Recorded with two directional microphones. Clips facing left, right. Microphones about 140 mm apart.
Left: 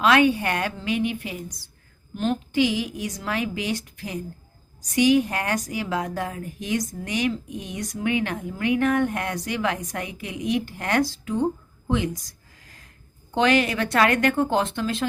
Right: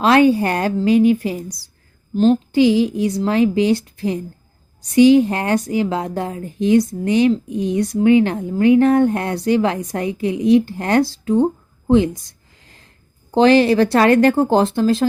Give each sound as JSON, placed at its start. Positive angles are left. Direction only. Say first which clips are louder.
{"t": 0.0, "sound": "a woman's voice", "louder": "right 6 dB", "side_deg": -35}
{"t": 12.6, "sound": "snort", "louder": "right 3 dB", "side_deg": -25}
{"t": 13.3, "sound": "speech", "louder": "right 9 dB", "side_deg": -30}